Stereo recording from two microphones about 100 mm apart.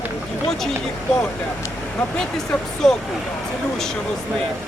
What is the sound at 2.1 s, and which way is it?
Speech, 5° left (ahead or behind).